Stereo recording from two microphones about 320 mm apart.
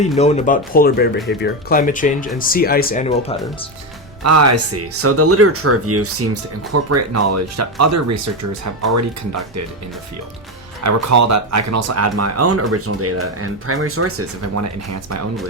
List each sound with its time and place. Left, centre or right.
0.2 s speech: left
4.2 s speech: right
10.8 s speech: right